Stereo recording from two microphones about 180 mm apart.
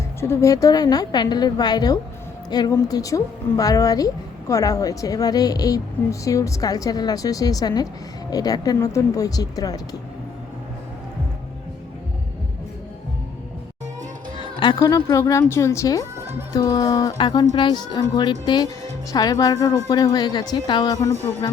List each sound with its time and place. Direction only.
0.2 s a woman's voice: 15° left (ahead or behind)
14.6 s a woman's voice: 20° left (ahead or behind)